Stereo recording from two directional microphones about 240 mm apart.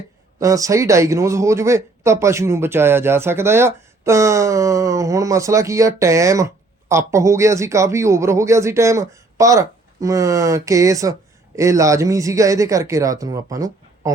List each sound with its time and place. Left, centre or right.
0.3 s speech: centre